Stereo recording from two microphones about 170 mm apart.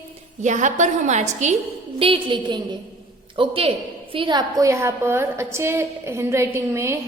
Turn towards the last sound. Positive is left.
turn(degrees=-15)  # may be behind; listen again after turning